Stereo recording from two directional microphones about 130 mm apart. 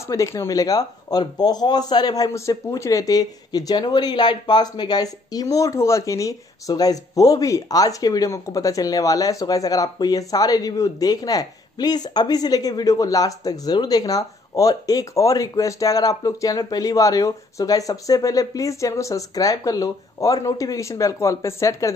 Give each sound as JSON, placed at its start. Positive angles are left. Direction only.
{"t": 0.1, "sound": "speech", "side_deg": 25}